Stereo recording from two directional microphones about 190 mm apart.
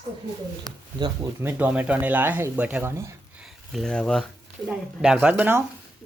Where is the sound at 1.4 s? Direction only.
10° right (ahead or behind).